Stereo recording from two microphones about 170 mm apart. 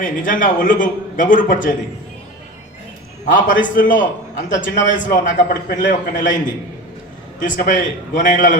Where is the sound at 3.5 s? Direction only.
90° left.